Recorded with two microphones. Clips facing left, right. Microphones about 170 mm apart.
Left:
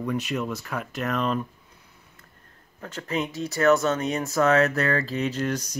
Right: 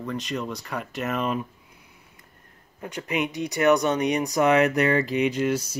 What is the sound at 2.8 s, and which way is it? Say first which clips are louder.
Speech: right 1 dB; 15° right (ahead or behind).